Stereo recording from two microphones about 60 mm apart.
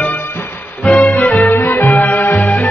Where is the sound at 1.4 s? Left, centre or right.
Left.